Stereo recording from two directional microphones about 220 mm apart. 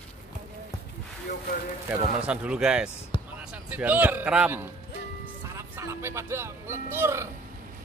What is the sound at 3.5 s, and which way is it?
A man's voice, 5° right (ahead or behind).